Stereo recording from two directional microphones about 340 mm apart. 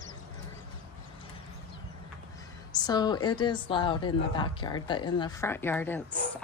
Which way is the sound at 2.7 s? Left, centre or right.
Centre.